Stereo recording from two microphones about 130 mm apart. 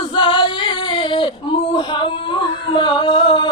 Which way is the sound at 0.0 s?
40° left (ahead or behind).